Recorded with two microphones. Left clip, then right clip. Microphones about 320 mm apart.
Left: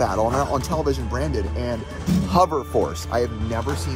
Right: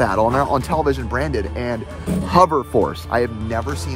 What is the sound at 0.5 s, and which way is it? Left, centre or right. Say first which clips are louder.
Speech: right 4 dB; centre.